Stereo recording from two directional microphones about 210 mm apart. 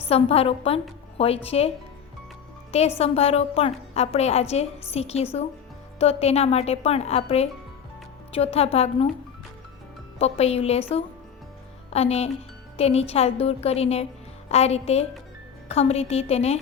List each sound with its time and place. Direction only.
0.0 s a woman's voice: 30° left (ahead or behind)
3.0 s a woman's voice: 30° left (ahead or behind)
10.2 s a woman's voice: 30° left (ahead or behind)